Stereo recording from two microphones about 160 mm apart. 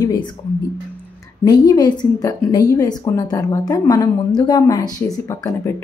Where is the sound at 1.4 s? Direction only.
25° left (ahead or behind).